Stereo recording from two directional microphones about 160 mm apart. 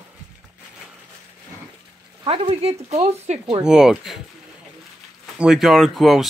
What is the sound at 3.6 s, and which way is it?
Speech, 5° right (ahead or behind).